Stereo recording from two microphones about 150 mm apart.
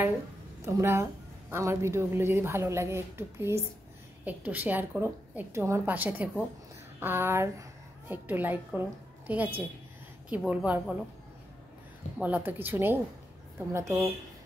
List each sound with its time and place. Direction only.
0.7 s a woman's voice: 20° right (ahead or behind)
12.2 s a woman's voice: 10° right (ahead or behind)